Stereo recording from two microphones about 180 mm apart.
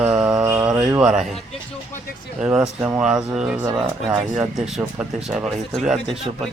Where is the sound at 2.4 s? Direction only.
10° right (ahead or behind).